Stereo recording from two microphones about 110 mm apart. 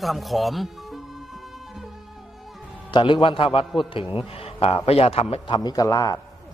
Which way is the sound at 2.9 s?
50° left (ahead or behind).